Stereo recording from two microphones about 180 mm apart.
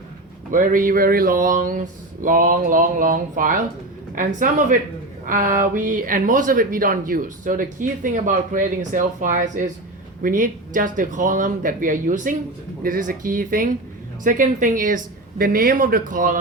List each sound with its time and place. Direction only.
0.5 s speech: 50° right (ahead or behind)